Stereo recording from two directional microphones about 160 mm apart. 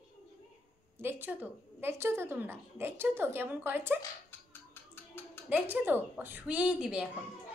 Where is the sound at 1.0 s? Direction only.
10° right (ahead or behind).